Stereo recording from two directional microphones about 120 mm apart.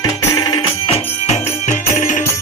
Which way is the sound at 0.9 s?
80° left.